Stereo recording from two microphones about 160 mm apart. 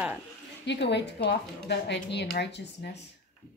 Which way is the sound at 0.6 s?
90° left.